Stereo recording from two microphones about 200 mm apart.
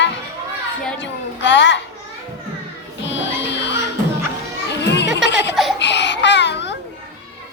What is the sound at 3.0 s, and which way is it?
Music, 65° left (ahead or behind).